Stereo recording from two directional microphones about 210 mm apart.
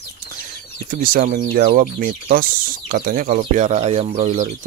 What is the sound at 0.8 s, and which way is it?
Speech, 40° right (ahead or behind).